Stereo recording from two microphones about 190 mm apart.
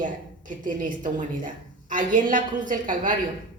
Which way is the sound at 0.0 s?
45° right (ahead or behind).